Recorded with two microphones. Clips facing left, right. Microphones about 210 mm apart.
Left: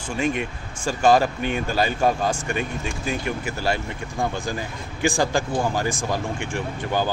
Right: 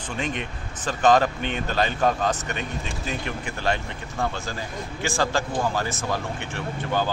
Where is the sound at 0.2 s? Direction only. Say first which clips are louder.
Left 6 dB; 10° left (ahead or behind).